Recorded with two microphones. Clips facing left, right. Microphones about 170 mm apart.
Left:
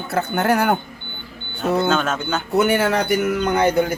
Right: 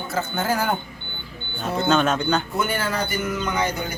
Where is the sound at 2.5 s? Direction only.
70° left (ahead or behind).